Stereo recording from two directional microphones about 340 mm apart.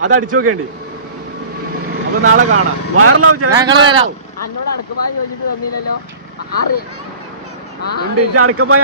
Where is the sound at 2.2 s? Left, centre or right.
Right.